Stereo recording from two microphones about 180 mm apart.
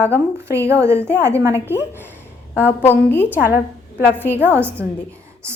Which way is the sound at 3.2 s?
10° right (ahead or behind).